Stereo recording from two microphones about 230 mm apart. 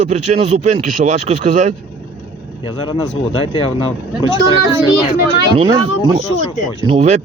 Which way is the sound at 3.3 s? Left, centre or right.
Left.